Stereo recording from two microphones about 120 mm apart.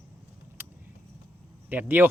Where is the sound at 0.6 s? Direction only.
15° right (ahead or behind).